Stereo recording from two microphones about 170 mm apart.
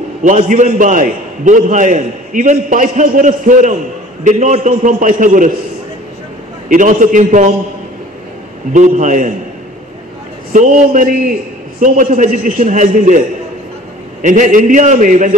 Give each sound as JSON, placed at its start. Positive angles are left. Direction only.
{"t": 0.2, "sound": "a man's voice", "side_deg": -50}
{"t": 6.7, "sound": "a man's voice", "side_deg": -50}
{"t": 8.7, "sound": "a man's voice", "side_deg": -45}
{"t": 10.5, "sound": "a man's voice", "side_deg": -50}
{"t": 14.2, "sound": "a man's voice", "side_deg": -45}